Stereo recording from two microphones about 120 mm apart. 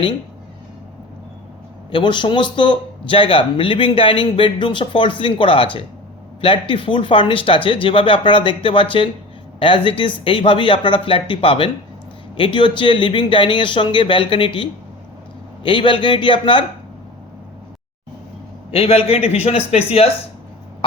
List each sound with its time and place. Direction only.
1.9 s a man's voice: 40° left (ahead or behind)
18.7 s a man's voice: 55° left (ahead or behind)